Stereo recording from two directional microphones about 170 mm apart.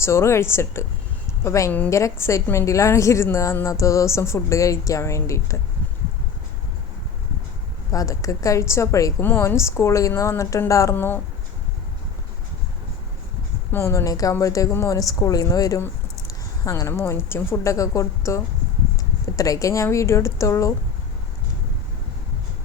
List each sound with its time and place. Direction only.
0.0 s a woman's voice: 15° left (ahead or behind)
7.9 s a woman's voice: 20° left (ahead or behind)
13.7 s a woman's voice: 15° left (ahead or behind)